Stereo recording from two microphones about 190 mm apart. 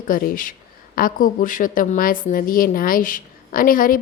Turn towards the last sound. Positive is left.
turn(degrees=50)  # may be behind; listen again after turning